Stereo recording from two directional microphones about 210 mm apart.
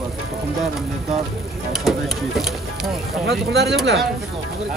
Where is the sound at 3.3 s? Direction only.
50° right (ahead or behind).